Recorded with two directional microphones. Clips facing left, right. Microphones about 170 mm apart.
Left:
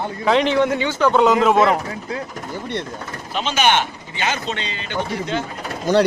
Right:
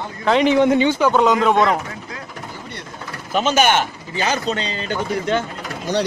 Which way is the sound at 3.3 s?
45° right (ahead or behind).